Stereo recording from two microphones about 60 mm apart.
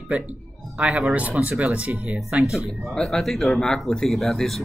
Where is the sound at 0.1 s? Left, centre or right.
Right.